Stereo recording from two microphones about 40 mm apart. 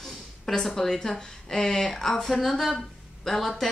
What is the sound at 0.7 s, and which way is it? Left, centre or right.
A woman's voice, centre.